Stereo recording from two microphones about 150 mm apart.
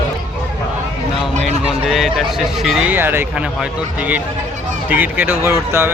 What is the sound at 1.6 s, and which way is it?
Speech, 5° right (ahead or behind).